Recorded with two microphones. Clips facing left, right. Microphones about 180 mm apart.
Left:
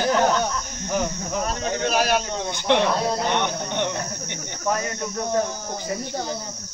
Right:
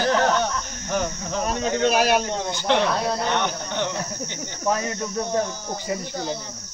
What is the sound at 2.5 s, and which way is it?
Speech, 15° left (ahead or behind).